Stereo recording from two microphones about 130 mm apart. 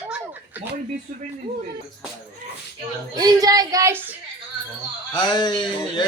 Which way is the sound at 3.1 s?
30° right (ahead or behind).